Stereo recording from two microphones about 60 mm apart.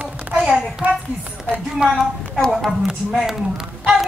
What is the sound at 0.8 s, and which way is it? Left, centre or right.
A child's voice, right.